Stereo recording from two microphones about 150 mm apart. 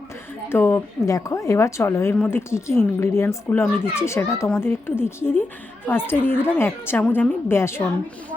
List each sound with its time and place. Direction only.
0.4 s a woman's voice: 15° left (ahead or behind)